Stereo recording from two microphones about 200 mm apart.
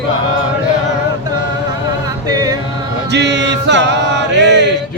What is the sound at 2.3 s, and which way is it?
Music, 20° right (ahead or behind).